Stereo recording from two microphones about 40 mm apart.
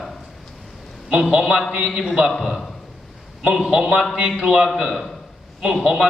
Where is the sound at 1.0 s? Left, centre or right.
Centre.